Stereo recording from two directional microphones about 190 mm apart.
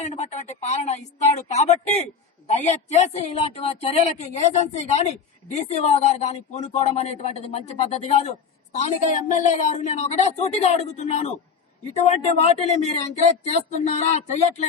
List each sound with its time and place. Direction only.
0.0 s a woman's voice: 35° left (ahead or behind)